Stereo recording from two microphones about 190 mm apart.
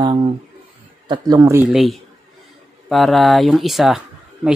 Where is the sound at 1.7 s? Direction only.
Centre (ahead or behind).